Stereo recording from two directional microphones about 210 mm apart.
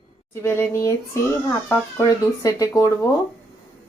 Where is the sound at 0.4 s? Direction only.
10° left (ahead or behind).